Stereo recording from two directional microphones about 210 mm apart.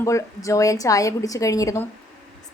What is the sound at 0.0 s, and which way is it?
A woman's voice, 15° left (ahead or behind).